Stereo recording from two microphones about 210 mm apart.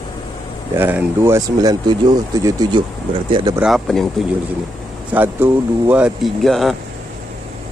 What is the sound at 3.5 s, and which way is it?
Speech, centre (ahead or behind).